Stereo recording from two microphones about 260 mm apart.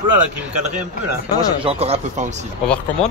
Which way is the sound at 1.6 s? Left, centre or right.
Right.